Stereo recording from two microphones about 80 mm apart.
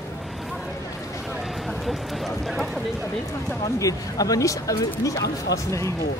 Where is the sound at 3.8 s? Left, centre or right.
Left.